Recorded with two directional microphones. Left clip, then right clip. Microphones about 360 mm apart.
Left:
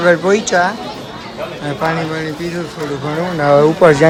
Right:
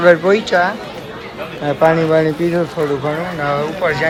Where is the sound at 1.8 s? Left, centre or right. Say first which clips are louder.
Right 7 dB; centre.